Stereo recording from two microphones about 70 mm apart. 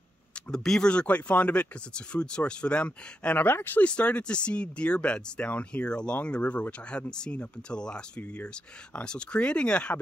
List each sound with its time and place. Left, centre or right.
0.5 s speech: centre; by 3.8 s left
3.8 s speech: centre